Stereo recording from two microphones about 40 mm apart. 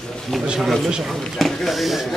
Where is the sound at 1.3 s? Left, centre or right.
Centre.